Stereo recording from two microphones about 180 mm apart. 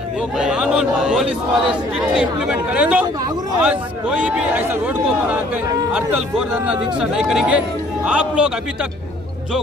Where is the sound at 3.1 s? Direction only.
20° right (ahead or behind).